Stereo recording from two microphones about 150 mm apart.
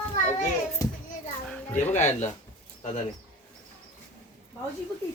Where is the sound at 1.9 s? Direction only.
50° left (ahead or behind).